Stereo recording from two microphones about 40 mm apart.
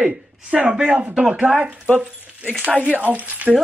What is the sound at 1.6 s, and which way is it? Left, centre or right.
Speech, right.